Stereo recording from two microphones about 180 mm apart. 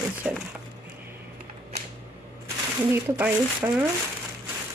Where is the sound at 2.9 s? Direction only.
10° right (ahead or behind).